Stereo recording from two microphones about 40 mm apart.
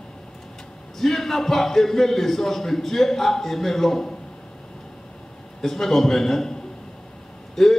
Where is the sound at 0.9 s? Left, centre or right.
Centre.